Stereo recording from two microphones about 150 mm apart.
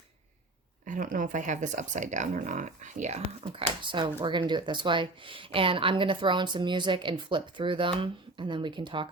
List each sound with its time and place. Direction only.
0.9 s speech: 60° right (ahead or behind); by 9.0 s 35° right (ahead or behind)